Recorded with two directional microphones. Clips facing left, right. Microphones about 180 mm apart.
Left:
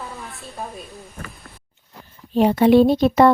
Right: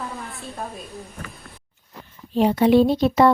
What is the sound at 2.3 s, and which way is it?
Speech, 60° left (ahead or behind).